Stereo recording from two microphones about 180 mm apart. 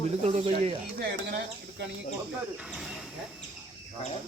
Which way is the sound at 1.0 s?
65° right (ahead or behind).